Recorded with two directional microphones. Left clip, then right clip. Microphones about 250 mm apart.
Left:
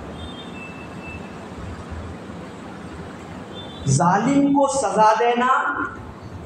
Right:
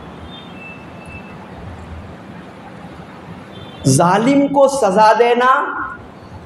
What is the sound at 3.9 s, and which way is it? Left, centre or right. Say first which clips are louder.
A woman's voice: right 5 dB; right.